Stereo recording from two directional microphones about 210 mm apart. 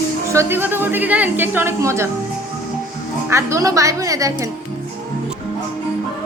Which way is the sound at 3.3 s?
15° right (ahead or behind).